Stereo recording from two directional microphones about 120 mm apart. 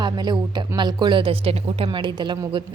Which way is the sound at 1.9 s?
40° right (ahead or behind).